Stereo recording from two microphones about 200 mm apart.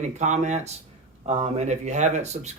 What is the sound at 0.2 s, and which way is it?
Speech, 35° right (ahead or behind).